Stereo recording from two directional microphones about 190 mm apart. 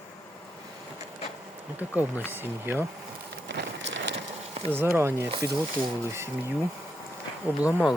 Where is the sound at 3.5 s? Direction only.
70° right (ahead or behind).